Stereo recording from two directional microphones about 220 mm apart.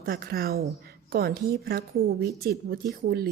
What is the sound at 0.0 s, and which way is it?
Speech, 45° right (ahead or behind).